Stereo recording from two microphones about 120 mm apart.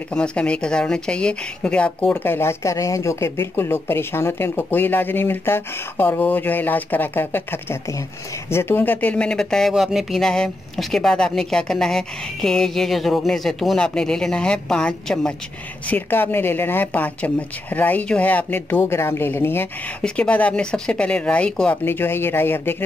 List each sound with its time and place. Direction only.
0.1 s speech: 10° left (ahead or behind)
21.8 s speech: 20° left (ahead or behind)